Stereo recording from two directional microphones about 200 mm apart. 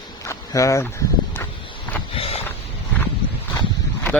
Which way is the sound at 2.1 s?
30° left (ahead or behind).